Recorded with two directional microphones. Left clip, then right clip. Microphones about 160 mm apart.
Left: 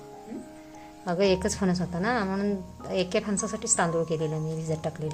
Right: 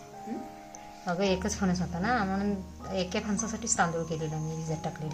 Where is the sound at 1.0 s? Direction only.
65° left (ahead or behind).